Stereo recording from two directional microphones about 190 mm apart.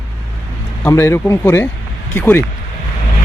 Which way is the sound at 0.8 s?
15° left (ahead or behind).